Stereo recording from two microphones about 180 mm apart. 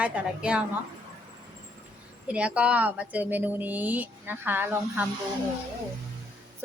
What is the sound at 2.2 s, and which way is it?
Speech, 5° right (ahead or behind).